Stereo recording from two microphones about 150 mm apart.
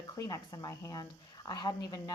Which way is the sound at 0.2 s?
25° left (ahead or behind).